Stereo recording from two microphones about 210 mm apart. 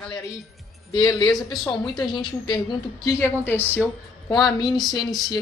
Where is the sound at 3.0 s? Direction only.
10° left (ahead or behind).